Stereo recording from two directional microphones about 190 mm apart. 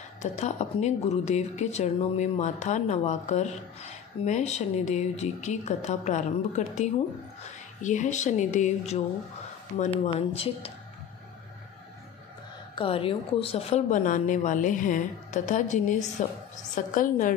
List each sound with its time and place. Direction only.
0.2 s a woman's voice: 35° left (ahead or behind)
12.7 s a woman's voice: 30° left (ahead or behind)